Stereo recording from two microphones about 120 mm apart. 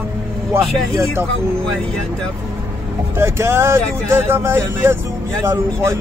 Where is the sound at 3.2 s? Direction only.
20° right (ahead or behind).